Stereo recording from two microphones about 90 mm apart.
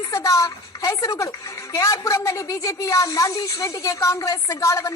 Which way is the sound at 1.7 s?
35° left (ahead or behind).